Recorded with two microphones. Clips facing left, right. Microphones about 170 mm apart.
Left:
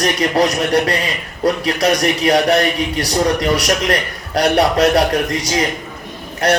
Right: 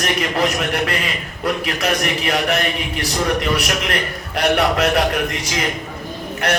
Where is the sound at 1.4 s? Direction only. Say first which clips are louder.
Left 6 dB; 35° left (ahead or behind).